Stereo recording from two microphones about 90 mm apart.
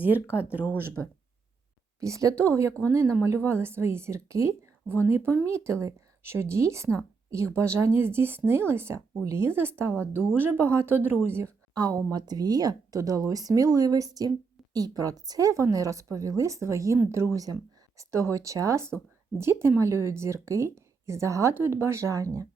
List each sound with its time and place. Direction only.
0.0 s speech: 20° right (ahead or behind)
2.0 s speech: 35° right (ahead or behind)
11.7 s speech: 45° right (ahead or behind)